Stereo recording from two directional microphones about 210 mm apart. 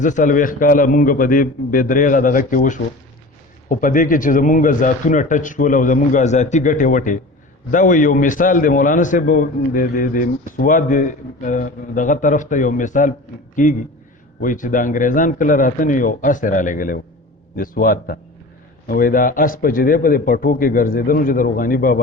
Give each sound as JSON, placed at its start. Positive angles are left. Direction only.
{"t": 0.0, "sound": "a man's voice", "side_deg": 35}